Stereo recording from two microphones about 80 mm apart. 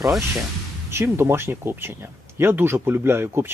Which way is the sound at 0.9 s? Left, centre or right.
Right.